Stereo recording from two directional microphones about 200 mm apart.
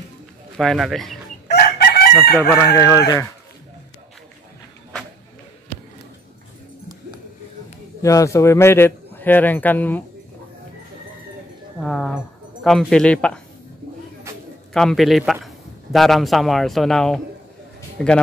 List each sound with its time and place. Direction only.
0.6 s speech: centre (ahead or behind)
1.5 s chicken: 50° left (ahead or behind)
2.3 s a man's voice: 10° left (ahead or behind)
8.0 s a man's voice: 15° left (ahead or behind)
11.8 s speech: 5° left (ahead or behind)
14.7 s a man's voice: centre (ahead or behind)